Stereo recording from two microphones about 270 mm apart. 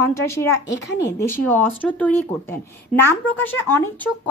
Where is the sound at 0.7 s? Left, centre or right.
Left.